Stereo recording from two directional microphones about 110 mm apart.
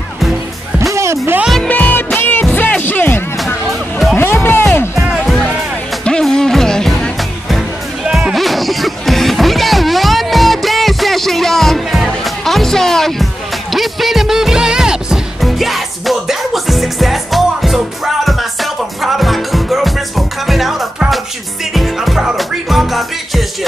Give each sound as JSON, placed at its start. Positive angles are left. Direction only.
{"t": 0.9, "sound": "music", "side_deg": -25}
{"t": 1.6, "sound": "music", "side_deg": 15}
{"t": 3.6, "sound": "music", "side_deg": 0}
{"t": 4.2, "sound": "music", "side_deg": 20}
{"t": 5.0, "sound": "music", "side_deg": 0}